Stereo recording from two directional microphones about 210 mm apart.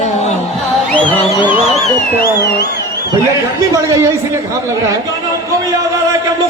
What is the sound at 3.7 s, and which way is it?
Speech, 15° right (ahead or behind).